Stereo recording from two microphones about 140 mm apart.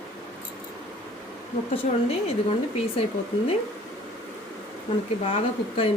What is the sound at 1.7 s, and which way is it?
Speech, 45° left (ahead or behind).